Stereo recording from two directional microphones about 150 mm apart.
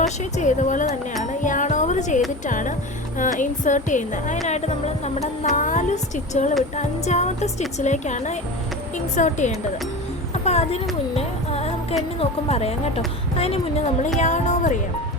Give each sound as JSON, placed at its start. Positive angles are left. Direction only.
{"t": 0.3, "sound": "a woman's voice", "side_deg": 55}
{"t": 1.2, "sound": "music", "side_deg": 55}
{"t": 2.5, "sound": "a woman's voice", "side_deg": 55}
{"t": 10.4, "sound": "speech", "side_deg": 45}
{"t": 11.1, "sound": "music", "side_deg": 45}
{"t": 12.2, "sound": "speech", "side_deg": 45}